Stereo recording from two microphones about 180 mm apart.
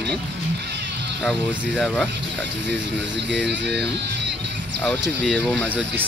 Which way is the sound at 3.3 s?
70° right (ahead or behind).